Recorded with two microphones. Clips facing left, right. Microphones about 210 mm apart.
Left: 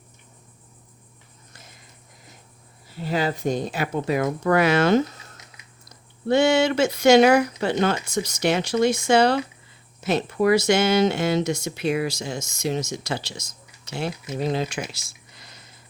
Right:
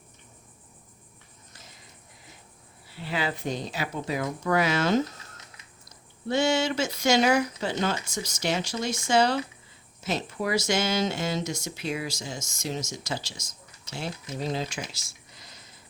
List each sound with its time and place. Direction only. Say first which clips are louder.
2.9 s speech: left 6 dB; 40° left (ahead or behind); by 5.0 s 65° left (ahead or behind)
6.2 s speech: left 6 dB; 60° left (ahead or behind)